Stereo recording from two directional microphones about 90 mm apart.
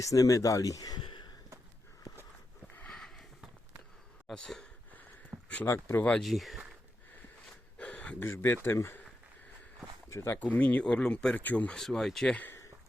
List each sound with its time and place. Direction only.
0.0 s speech: 40° left (ahead or behind)
1.0 s a sound: 60° left (ahead or behind)
2.9 s sniff: 5° left (ahead or behind)
4.3 s speech: 5° left (ahead or behind)
5.3 s a sound: 35° right (ahead or behind)
5.6 s speech: 30° left (ahead or behind)
6.0 s speech: 15° left (ahead or behind)
6.2 s speech: centre (ahead or behind)
7.8 s a sound: 15° left (ahead or behind)
8.3 s speech: 25° left (ahead or behind)
10.1 s speech: 35° left (ahead or behind)
10.3 s speech: 15° left (ahead or behind)
11.8 s speech: 5° left (ahead or behind)